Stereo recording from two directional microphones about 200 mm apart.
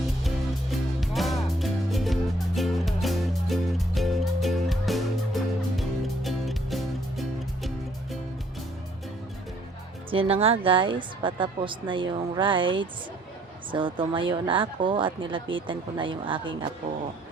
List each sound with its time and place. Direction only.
0.3 s music: centre (ahead or behind)
10.1 s a woman's voice: 25° right (ahead or behind)